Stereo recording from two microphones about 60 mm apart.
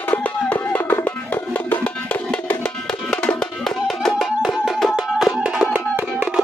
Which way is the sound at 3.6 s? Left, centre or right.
Centre.